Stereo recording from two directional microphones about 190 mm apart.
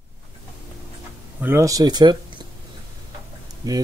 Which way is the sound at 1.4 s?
15° right (ahead or behind).